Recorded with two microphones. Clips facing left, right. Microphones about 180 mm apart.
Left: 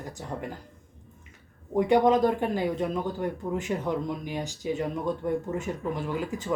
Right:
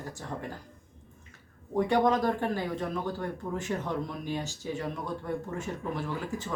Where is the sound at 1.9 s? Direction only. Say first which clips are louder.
Left 5 dB; 15° left (ahead or behind).